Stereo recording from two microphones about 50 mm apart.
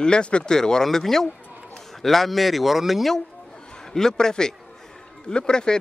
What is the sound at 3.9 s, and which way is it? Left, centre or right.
A man's voice, centre.